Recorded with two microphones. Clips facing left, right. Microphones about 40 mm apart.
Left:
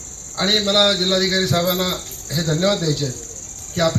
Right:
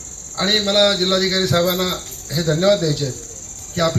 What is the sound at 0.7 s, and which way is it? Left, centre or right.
A man's voice, centre.